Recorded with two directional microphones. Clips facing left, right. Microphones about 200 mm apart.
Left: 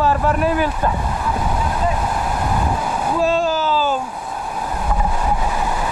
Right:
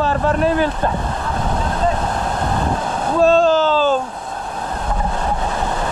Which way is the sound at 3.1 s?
10° left (ahead or behind).